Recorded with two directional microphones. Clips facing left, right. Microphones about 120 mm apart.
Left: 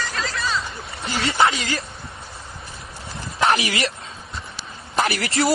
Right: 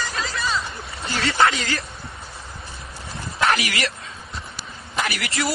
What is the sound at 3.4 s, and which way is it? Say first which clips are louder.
Bow-wow: left 2 dB; 30° left (ahead or behind).